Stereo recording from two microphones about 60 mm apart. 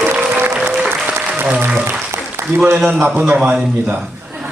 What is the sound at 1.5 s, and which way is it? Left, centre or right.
Speech, right.